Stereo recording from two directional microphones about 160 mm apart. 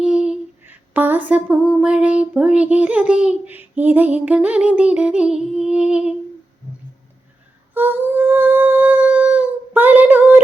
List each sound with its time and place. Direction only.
0.0 s female singing: 5° right (ahead or behind)
7.7 s humming: 10° right (ahead or behind)